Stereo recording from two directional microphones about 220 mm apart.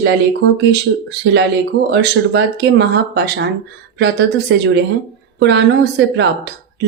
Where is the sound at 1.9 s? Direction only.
50° right (ahead or behind).